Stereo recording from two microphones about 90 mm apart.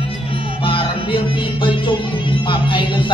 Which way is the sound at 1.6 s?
65° left (ahead or behind).